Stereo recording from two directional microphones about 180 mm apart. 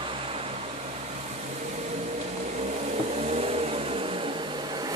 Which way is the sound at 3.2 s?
35° right (ahead or behind).